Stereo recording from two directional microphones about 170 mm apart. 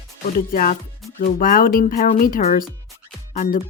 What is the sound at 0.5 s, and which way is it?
Speech, 55° left (ahead or behind).